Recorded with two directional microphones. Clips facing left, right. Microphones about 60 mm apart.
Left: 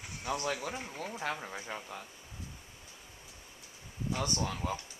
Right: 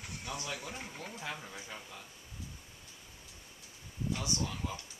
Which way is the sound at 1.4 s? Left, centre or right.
Left.